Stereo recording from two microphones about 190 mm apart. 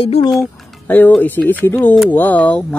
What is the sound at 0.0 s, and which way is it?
Speech, 30° left (ahead or behind).